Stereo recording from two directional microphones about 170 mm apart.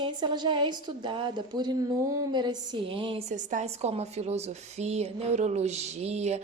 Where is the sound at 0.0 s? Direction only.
25° right (ahead or behind).